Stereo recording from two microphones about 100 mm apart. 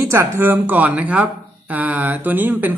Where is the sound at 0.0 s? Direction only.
25° right (ahead or behind).